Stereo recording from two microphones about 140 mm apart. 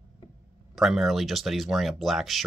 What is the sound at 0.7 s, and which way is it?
Speech, centre (ahead or behind).